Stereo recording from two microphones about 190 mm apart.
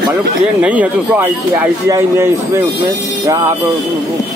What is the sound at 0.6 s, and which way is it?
Speech, 10° right (ahead or behind).